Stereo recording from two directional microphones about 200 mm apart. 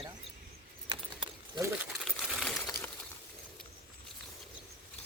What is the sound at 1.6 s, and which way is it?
Crumpling, 5° right (ahead or behind).